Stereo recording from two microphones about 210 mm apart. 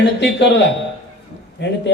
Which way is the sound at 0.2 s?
55° left (ahead or behind).